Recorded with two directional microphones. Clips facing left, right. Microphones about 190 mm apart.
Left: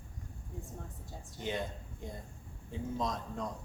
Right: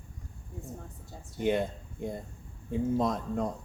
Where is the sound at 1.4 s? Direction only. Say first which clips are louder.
Right 9 dB; 55° right (ahead or behind).